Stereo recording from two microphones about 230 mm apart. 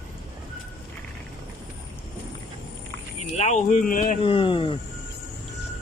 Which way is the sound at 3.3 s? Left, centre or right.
Left.